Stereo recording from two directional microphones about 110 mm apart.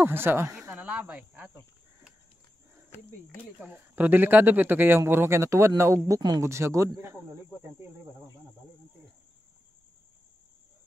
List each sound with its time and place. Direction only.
0.0 s speech: 20° right (ahead or behind)
3.6 s speech: 15° right (ahead or behind)